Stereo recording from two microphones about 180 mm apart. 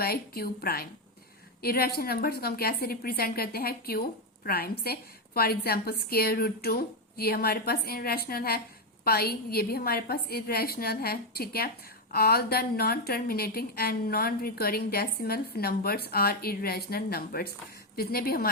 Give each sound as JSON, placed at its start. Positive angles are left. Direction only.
{"t": 0.0, "sound": "a woman's voice", "side_deg": 55}